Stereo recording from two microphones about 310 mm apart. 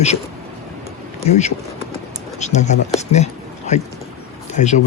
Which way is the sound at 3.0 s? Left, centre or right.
Left.